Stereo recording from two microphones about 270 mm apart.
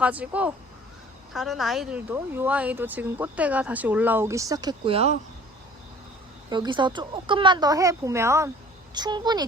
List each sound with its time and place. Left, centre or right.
0.0 s speech: centre; by 5.1 s right
6.5 s speech: centre